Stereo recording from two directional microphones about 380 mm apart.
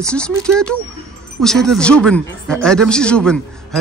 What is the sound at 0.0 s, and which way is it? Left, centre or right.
Speech, centre.